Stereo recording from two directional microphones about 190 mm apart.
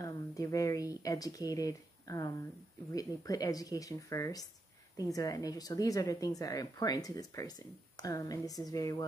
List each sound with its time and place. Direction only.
0.0 s speech: 20° left (ahead or behind)